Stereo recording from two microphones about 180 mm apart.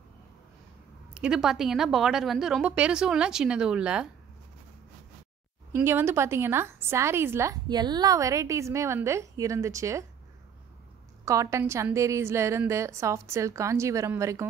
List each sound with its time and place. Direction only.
1.1 s a woman's voice: 5° right (ahead or behind)
5.7 s a woman's voice: 15° right (ahead or behind)
11.2 s a woman's voice: 15° right (ahead or behind)